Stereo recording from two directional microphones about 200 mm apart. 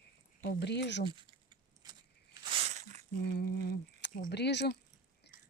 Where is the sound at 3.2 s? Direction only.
55° left (ahead or behind).